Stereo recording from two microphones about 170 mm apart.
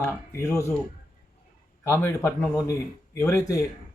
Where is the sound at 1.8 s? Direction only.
15° left (ahead or behind).